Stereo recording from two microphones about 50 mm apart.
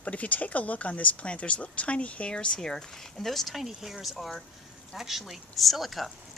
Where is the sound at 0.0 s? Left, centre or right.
Left.